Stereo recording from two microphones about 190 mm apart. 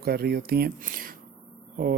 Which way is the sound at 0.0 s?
55° right (ahead or behind).